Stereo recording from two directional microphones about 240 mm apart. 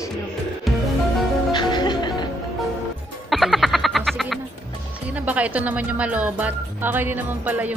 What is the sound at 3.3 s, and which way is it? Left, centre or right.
Frog, centre.